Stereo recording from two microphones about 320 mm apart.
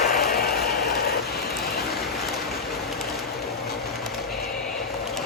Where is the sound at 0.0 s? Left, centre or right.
Left.